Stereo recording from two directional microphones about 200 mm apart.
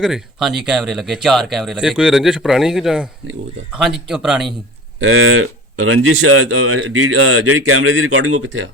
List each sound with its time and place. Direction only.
0.0 s speech: centre (ahead or behind)
4.9 s speech: 90° right